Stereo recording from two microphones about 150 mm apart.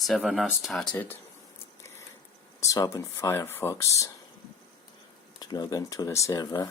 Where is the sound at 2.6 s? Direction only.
25° left (ahead or behind).